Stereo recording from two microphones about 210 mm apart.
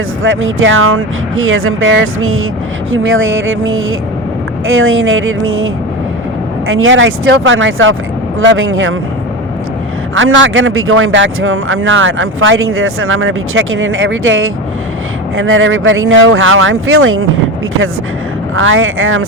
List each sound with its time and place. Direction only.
0.2 s speech: 70° right (ahead or behind)
10.2 s speech: 65° right (ahead or behind)
18.5 s speech: 75° right (ahead or behind)